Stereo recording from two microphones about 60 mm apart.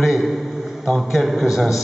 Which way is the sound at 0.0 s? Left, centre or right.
Centre.